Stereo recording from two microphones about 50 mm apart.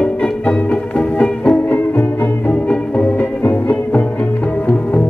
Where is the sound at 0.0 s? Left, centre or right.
Left.